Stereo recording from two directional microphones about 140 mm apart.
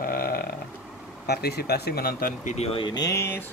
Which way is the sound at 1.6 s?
90° left.